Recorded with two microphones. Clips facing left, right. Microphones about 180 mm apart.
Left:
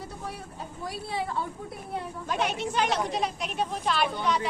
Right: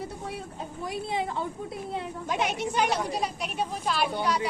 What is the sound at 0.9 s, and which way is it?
A woman's voice, 20° right (ahead or behind).